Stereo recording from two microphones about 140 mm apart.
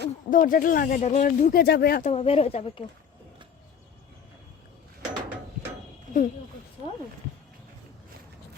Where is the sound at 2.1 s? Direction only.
45° left (ahead or behind).